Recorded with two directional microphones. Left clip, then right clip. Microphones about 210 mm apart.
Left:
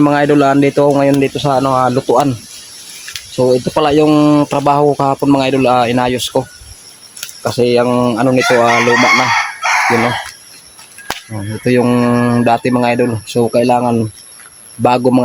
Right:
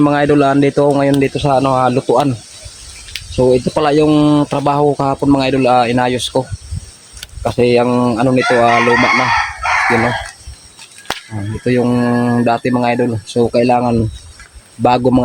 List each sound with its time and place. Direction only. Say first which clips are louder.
0.0 s speech: left 1 dB; 5° left (ahead or behind)
8.8 s chicken: left 1 dB; 50° left (ahead or behind)
11.6 s speech: left 2 dB; 25° left (ahead or behind); by 15.2 s 5° left (ahead or behind)